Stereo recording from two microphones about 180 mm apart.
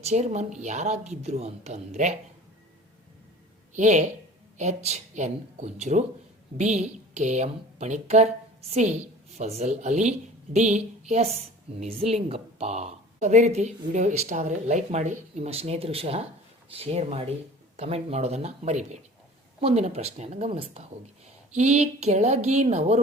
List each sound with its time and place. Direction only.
0.0 s a woman's voice: 40° right (ahead or behind)
3.8 s a woman's voice: 45° right (ahead or behind)